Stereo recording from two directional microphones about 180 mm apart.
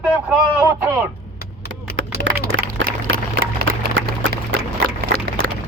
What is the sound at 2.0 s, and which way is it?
Run, 90° right.